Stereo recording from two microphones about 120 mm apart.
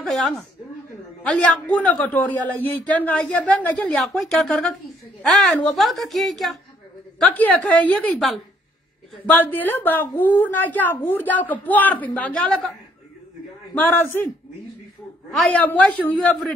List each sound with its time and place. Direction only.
0.0 s a woman's voice: centre (ahead or behind)
1.2 s a man's voice: 15° left (ahead or behind)
3.9 s a woman's voice: centre (ahead or behind)
9.2 s a man's voice: 15° left (ahead or behind)
13.7 s a man's voice: 15° left (ahead or behind)
15.5 s a man's voice: 15° left (ahead or behind)